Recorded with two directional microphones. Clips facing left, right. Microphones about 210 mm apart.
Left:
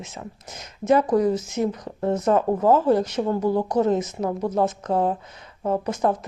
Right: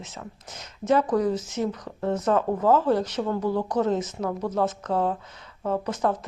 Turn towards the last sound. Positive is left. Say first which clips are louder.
# left 3 dB
turn(degrees=15)  # may be behind; listen again after turning